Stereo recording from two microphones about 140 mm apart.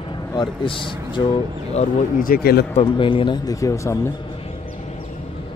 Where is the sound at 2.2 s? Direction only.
90° left.